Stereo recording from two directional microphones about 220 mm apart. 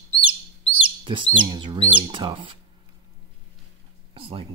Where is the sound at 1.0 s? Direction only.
20° right (ahead or behind).